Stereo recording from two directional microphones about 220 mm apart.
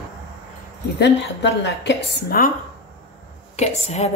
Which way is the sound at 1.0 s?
50° left (ahead or behind).